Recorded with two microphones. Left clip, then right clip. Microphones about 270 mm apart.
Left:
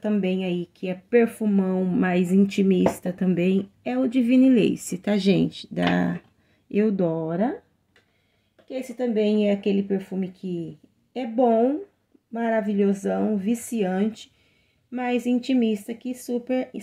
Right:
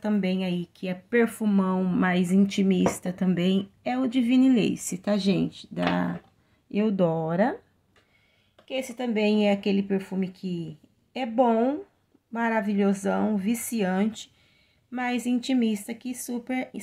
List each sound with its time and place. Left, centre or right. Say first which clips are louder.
0.2 s speech: left 3 dB; right
0.6 s a woman's voice: left 3 dB; centre
6.7 s speech: left 4 dB; centre
7.0 s speech: right 1 dB; centre
8.8 s speech: left 4 dB; right
15.2 s speech: left 3 dB; right
15.5 s speech: left 3 dB; centre